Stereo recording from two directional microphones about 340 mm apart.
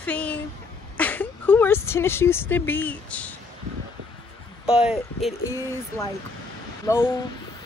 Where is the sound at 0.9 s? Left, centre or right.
Centre.